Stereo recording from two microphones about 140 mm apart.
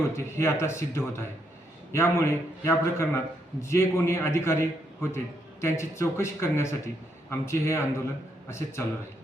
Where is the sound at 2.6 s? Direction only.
15° left (ahead or behind).